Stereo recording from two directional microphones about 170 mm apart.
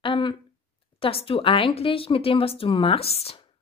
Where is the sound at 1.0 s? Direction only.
35° left (ahead or behind).